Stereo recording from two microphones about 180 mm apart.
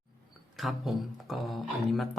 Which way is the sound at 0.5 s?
Centre (ahead or behind).